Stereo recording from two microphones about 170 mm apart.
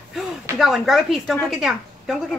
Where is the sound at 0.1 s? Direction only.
Centre (ahead or behind).